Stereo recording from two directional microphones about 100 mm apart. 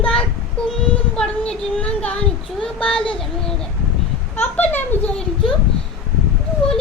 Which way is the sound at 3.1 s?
5° left (ahead or behind).